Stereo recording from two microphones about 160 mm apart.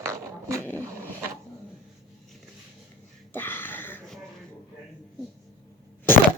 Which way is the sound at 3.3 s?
15° left (ahead or behind).